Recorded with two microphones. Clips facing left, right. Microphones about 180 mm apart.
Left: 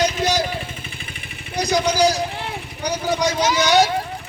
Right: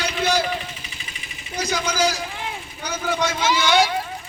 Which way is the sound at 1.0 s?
55° left (ahead or behind).